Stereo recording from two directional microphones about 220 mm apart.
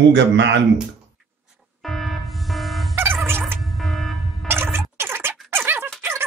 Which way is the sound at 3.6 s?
Centre (ahead or behind).